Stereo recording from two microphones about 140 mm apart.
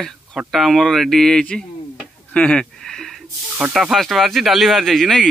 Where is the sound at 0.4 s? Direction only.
Centre (ahead or behind).